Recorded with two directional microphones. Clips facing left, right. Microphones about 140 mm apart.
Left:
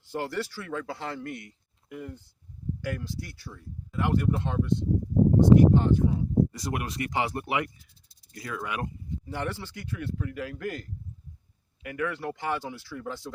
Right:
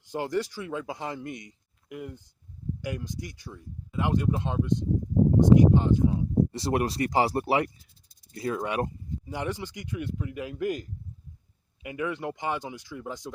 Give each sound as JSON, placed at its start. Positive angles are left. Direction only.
{"t": 0.1, "sound": "speech", "side_deg": -15}
{"t": 6.5, "sound": "speech", "side_deg": -30}
{"t": 9.2, "sound": "speech", "side_deg": -15}